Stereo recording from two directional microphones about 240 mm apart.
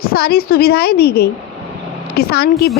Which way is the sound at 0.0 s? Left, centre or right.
Left.